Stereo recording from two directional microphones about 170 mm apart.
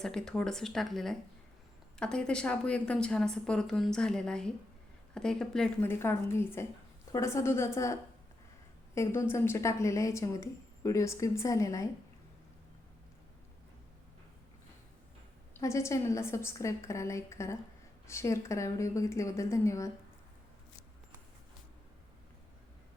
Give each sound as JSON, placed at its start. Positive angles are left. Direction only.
{"t": 0.0, "sound": "a woman's voice", "side_deg": 5}
{"t": 5.9, "sound": "a woman's voice", "side_deg": 15}
{"t": 9.0, "sound": "a woman's voice", "side_deg": 15}
{"t": 15.5, "sound": "a woman's voice", "side_deg": 15}